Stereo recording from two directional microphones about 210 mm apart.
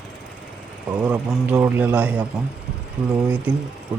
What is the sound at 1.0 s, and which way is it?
Speech, 5° right (ahead or behind).